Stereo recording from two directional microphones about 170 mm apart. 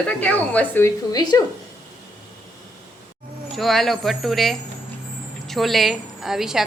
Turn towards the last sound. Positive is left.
turn(degrees=0)  # may be behind; listen again after turning